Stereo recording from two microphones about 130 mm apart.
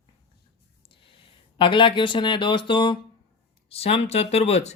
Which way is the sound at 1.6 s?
40° left (ahead or behind).